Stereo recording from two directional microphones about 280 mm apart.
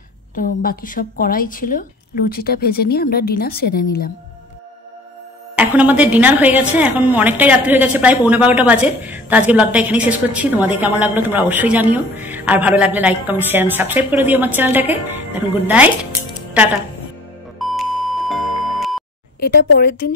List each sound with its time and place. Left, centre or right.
0.4 s a woman's voice: left
5.6 s a woman's voice: centre
17.6 s music: centre
19.4 s a woman's voice: left